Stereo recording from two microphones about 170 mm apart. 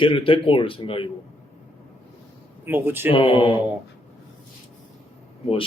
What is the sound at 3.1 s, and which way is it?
Speech, 30° left (ahead or behind).